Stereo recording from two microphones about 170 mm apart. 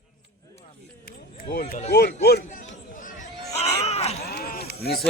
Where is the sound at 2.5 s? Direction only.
50° left (ahead or behind).